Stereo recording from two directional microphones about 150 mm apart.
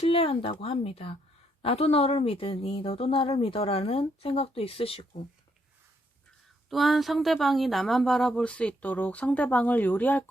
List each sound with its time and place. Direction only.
0.0 s a woman's voice: 40° left (ahead or behind)
6.7 s speech: centre (ahead or behind)